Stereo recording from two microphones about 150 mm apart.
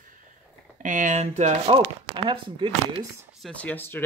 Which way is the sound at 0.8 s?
55° right (ahead or behind).